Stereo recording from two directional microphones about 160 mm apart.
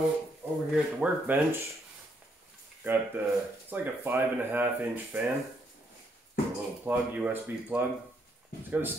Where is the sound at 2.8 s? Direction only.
15° right (ahead or behind).